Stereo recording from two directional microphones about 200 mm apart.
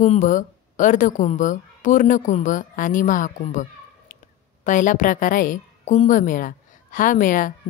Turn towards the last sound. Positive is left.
turn(degrees=40)  # may be behind; listen again after turning